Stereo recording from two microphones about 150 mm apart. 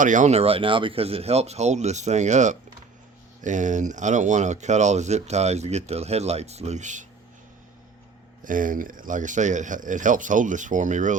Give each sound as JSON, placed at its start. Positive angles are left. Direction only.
{"t": 0.0, "sound": "speech", "side_deg": -55}
{"t": 8.4, "sound": "speech", "side_deg": -65}